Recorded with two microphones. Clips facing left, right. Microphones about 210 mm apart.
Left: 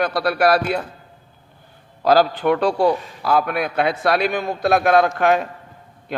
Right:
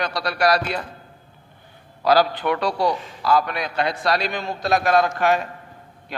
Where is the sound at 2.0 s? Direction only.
45° left (ahead or behind).